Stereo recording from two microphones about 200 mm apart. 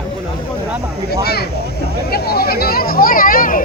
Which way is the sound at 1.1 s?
55° left (ahead or behind).